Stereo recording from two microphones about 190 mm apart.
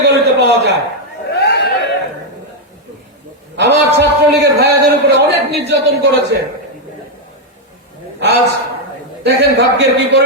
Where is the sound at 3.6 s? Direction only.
65° right (ahead or behind).